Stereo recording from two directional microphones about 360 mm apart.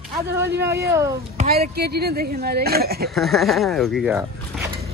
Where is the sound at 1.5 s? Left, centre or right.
Right.